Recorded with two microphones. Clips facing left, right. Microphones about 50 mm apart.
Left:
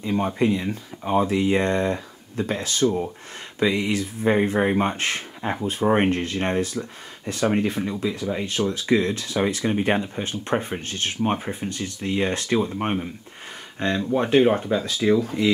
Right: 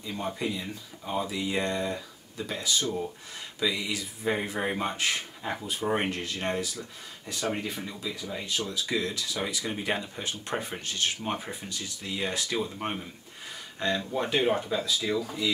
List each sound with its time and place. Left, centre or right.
0.0 s speech: left